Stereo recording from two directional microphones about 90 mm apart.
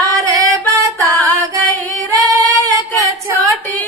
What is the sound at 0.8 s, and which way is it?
Music, 40° right (ahead or behind).